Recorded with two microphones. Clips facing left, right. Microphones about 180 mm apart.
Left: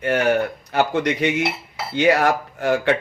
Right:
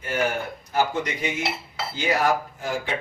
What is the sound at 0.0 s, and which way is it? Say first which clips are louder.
Speech: left 7 dB; 70° left (ahead or behind).